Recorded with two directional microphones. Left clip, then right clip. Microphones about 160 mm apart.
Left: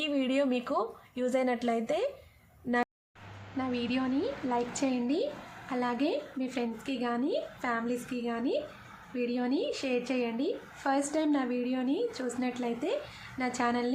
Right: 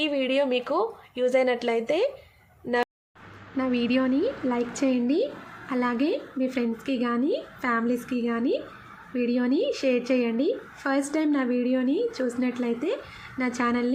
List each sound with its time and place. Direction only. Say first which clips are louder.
0.0 s speech: right 5 dB; 15° right (ahead or behind)
3.6 s a woman's voice: right 8 dB; 10° right (ahead or behind)